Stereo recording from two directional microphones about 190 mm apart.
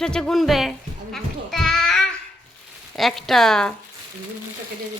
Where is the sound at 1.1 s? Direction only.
Centre (ahead or behind).